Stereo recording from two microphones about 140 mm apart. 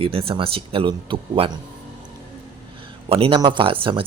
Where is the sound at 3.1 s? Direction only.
40° right (ahead or behind).